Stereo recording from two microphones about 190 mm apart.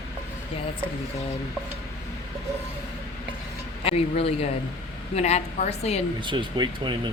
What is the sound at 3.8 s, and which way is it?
A woman's voice, 30° left (ahead or behind).